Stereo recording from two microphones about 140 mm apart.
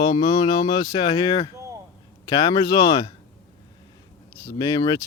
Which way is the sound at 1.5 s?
20° right (ahead or behind).